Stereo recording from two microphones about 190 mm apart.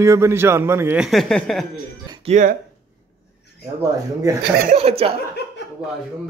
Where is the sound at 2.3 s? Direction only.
40° right (ahead or behind).